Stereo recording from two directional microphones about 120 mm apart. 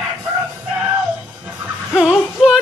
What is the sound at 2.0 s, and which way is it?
Speech, 5° right (ahead or behind).